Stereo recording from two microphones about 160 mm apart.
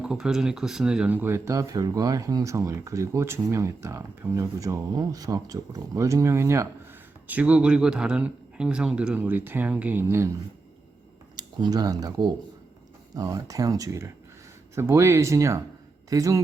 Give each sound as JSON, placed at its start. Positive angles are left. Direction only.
{"t": 0.0, "sound": "a man's voice", "side_deg": -5}
{"t": 11.3, "sound": "a man's voice", "side_deg": -25}